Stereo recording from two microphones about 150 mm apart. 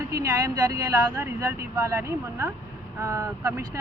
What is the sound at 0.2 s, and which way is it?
Speech, 25° right (ahead or behind).